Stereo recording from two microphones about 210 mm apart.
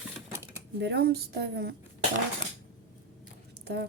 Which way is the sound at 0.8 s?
50° right (ahead or behind).